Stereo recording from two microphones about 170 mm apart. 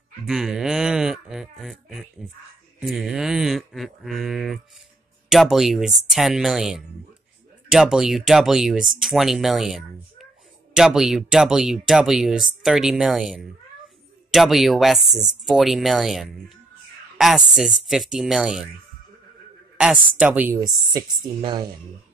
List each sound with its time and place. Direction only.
0.3 s a sound: centre (ahead or behind)
5.3 s speech: centre (ahead or behind)
19.8 s speech: 5° right (ahead or behind)
20.6 s speech: 25° right (ahead or behind)